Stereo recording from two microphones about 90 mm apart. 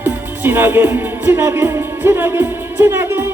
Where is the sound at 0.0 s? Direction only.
25° right (ahead or behind).